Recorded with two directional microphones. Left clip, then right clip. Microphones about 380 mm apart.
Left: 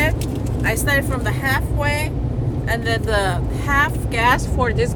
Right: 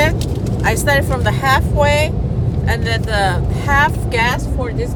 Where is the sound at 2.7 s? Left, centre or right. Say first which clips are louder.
Right 1 dB; centre.